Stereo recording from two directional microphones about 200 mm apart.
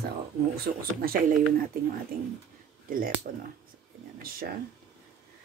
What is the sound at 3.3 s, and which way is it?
Speech, 45° right (ahead or behind).